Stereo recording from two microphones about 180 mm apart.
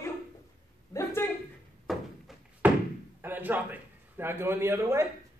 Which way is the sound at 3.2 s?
10° right (ahead or behind).